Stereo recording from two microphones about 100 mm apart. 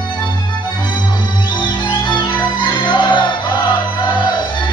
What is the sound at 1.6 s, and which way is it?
Music, 50° left (ahead or behind).